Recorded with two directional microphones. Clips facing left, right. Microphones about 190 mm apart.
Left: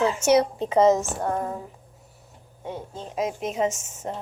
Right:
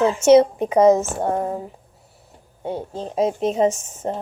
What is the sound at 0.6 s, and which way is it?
Speech, 15° right (ahead or behind).